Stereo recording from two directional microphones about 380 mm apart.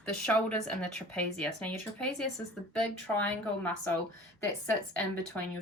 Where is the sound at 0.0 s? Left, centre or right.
Centre.